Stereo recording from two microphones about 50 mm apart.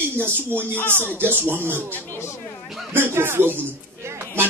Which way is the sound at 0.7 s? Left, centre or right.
Left.